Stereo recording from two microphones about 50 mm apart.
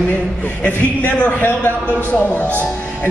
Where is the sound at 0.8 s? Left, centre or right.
Left.